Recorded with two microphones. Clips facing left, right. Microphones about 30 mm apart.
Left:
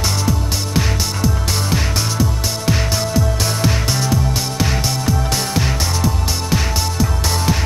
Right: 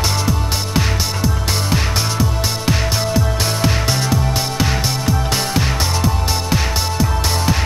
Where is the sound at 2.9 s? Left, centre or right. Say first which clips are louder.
Even; centre.